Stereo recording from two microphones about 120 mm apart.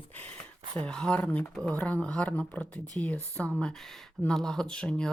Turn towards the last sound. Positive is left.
turn(degrees=5)  # may be behind; listen again after turning